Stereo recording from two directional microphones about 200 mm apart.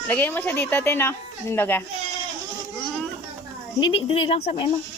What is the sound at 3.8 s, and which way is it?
Speech, 25° left (ahead or behind).